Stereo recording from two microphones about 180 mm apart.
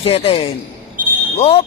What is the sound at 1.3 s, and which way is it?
Speech, 35° left (ahead or behind).